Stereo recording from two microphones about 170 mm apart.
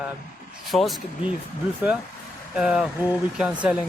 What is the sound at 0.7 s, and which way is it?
Speech, centre (ahead or behind).